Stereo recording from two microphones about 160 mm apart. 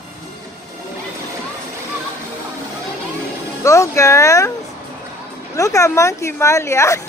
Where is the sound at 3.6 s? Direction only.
20° left (ahead or behind).